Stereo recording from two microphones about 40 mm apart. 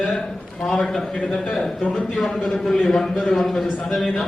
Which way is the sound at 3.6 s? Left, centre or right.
Centre.